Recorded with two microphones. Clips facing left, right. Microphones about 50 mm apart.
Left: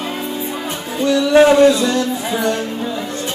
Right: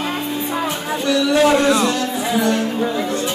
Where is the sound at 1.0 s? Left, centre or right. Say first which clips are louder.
Left 4 dB; left.